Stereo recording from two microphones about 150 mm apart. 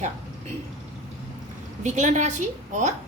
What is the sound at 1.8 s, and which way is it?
A woman's voice, 55° right (ahead or behind).